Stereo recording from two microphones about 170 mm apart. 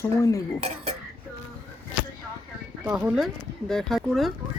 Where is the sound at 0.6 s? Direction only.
40° right (ahead or behind).